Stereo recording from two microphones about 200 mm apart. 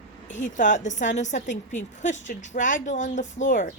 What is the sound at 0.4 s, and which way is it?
A woman's voice, 40° left (ahead or behind).